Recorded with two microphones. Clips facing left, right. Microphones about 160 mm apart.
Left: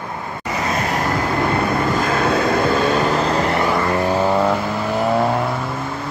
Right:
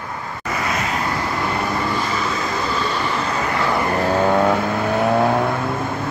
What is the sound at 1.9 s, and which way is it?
Vehicle, 55° left (ahead or behind).